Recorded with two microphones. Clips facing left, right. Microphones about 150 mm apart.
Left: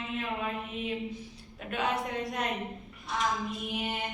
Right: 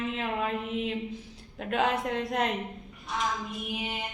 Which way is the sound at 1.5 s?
70° right (ahead or behind).